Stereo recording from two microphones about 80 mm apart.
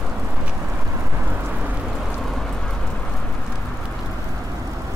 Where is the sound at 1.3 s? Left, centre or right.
Right.